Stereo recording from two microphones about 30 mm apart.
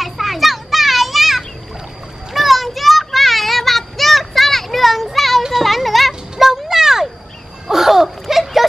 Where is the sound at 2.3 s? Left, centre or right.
Centre.